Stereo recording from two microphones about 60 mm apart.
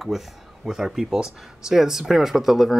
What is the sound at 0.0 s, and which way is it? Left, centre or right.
Speech, centre.